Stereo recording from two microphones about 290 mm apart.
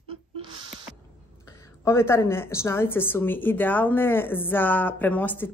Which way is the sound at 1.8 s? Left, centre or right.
Centre.